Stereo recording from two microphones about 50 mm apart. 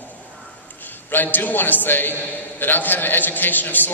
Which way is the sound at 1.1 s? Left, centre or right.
Left.